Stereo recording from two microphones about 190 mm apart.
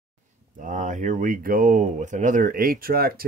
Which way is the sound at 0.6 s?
40° right (ahead or behind).